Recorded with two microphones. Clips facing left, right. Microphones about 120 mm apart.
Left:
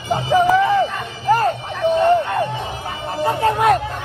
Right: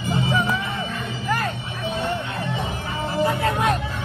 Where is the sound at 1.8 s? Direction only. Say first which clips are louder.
Left 12 dB; 50° left (ahead or behind).